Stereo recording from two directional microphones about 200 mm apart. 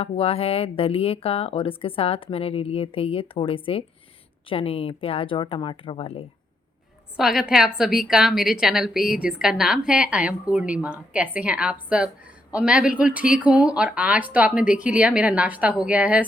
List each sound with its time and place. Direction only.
0.0 s speech: 30° left (ahead or behind)
7.2 s a woman's voice: centre (ahead or behind)